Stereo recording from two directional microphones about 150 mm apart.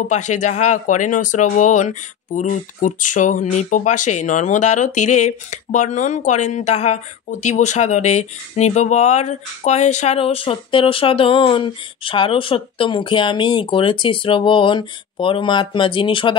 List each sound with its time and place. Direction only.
0.1 s speech: 55° left (ahead or behind); by 16.3 s 35° left (ahead or behind)